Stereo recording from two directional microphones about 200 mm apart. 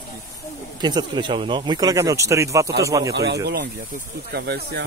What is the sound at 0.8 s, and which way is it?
Speech, 20° right (ahead or behind).